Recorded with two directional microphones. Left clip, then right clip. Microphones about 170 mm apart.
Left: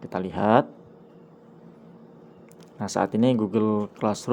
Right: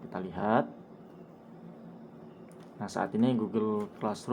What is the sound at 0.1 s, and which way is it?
Speech, 45° left (ahead or behind).